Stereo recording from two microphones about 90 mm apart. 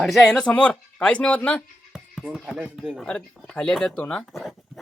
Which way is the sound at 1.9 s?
5° right (ahead or behind).